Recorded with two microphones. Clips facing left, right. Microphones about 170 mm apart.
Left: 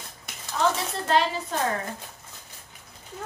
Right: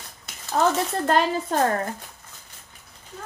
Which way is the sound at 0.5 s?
50° right (ahead or behind).